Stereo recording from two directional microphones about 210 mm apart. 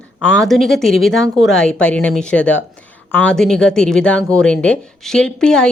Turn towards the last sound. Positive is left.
turn(degrees=5)  # may be behind; listen again after turning